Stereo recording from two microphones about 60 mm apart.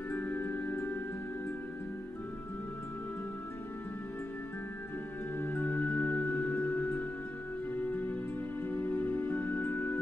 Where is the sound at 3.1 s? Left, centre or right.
Left.